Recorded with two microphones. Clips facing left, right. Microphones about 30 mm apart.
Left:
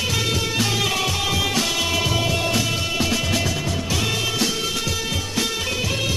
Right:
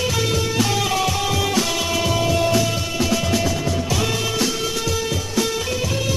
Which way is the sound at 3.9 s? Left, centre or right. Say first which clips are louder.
Left 1 dB; centre.